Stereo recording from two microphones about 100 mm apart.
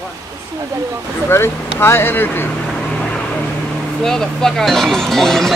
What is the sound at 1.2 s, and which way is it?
Speech, 25° left (ahead or behind).